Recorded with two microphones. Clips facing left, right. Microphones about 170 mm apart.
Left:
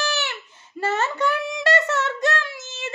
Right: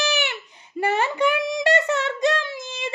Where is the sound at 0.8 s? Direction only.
15° right (ahead or behind).